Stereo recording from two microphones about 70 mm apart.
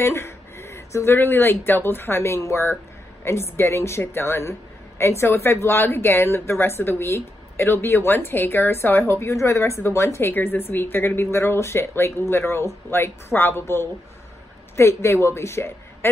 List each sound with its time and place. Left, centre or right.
0.0 s a woman's voice: left